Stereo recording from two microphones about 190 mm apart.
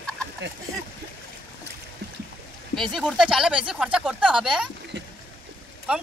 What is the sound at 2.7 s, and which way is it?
Speech, centre (ahead or behind).